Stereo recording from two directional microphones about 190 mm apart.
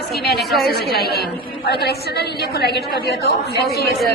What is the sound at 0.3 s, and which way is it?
Speech, centre (ahead or behind).